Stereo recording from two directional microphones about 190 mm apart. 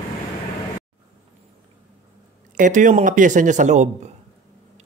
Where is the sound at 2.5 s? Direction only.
40° right (ahead or behind).